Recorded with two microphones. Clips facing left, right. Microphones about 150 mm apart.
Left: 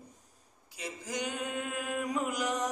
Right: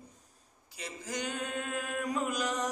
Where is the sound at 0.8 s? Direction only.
15° left (ahead or behind).